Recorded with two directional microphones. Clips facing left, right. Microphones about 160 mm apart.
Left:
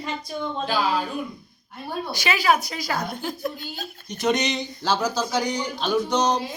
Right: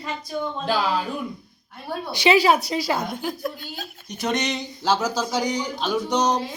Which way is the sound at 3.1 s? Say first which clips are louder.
Right 1 dB; 5° right (ahead or behind).